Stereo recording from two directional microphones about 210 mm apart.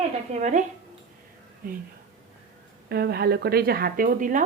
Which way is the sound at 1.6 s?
40° right (ahead or behind).